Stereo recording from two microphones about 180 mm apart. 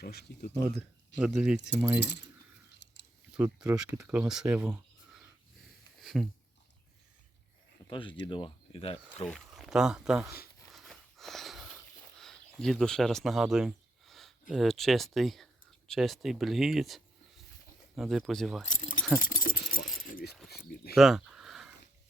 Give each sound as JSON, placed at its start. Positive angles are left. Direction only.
{"t": 0.0, "sound": "speech", "side_deg": 65}
{"t": 1.2, "sound": "speech", "side_deg": -5}
{"t": 2.0, "sound": "keys jangling", "side_deg": 70}
{"t": 2.7, "sound": "a sound", "side_deg": 75}
{"t": 3.3, "sound": "speech", "side_deg": -10}
{"t": 6.0, "sound": "a sound", "side_deg": 0}
{"t": 7.9, "sound": "speech", "side_deg": 30}
{"t": 9.3, "sound": "speech", "side_deg": 0}
{"t": 10.7, "sound": "wheeze", "side_deg": 0}
{"t": 12.2, "sound": "speech", "side_deg": 0}
{"t": 18.6, "sound": "speech", "side_deg": 45}
{"t": 19.2, "sound": "keys jangling", "side_deg": 50}
{"t": 20.1, "sound": "a sound", "side_deg": 50}
{"t": 20.9, "sound": "a sound", "side_deg": 0}